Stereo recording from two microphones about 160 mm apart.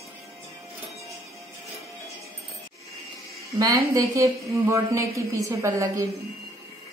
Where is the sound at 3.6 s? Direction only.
20° right (ahead or behind).